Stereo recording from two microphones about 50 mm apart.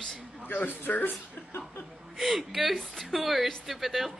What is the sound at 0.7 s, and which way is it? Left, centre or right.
Speech, left.